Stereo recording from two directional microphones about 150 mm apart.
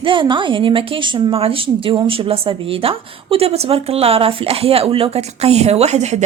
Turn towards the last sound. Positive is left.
turn(degrees=-50)  # may be behind; listen again after turning